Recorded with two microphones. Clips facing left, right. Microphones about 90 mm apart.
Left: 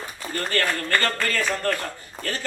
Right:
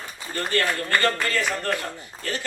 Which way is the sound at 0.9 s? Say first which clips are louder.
Right 2 dB; 20° right (ahead or behind).